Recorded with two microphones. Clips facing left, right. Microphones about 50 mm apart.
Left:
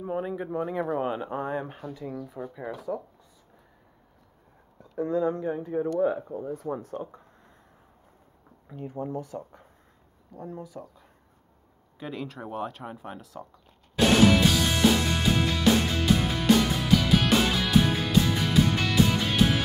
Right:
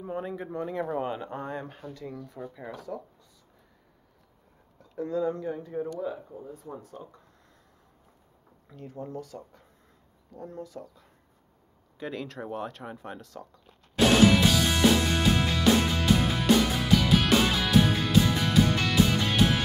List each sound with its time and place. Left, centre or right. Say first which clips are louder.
0.0 s speech: left 3 dB; centre
4.7 s speech: left 3 dB; left
5.9 s speech: left 8 dB; left
8.6 s speech: left 5 dB; centre
10.3 s speech: left 1 dB; centre
12.0 s speech: even; centre
14.5 s music: even; centre